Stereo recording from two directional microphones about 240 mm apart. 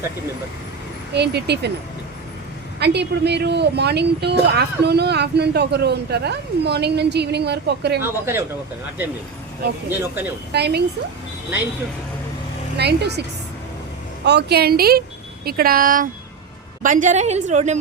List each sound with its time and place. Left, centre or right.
1.1 s a woman's voice: right
2.7 s a woman's voice: right
10.0 s speech: centre
10.5 s a woman's voice: right
12.7 s a woman's voice: right
14.3 s a woman's voice: right